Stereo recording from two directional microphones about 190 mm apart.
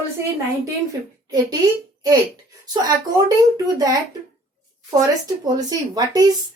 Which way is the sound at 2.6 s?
20° right (ahead or behind).